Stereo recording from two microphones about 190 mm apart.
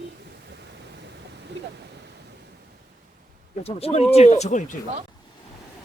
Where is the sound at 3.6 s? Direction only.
30° left (ahead or behind).